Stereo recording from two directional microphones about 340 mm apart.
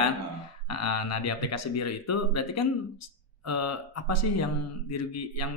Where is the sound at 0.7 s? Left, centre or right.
Left.